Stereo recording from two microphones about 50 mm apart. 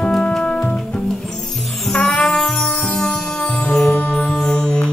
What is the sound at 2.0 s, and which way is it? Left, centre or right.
Music, centre.